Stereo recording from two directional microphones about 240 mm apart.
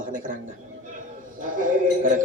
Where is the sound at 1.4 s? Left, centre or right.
Right.